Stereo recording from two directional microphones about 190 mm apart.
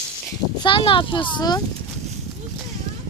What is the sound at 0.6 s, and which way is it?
Speech, 25° left (ahead or behind).